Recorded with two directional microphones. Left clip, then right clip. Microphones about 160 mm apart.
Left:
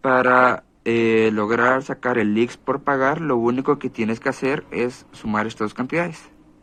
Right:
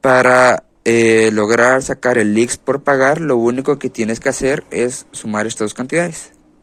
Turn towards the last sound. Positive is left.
turn(degrees=-25)  # may be behind; listen again after turning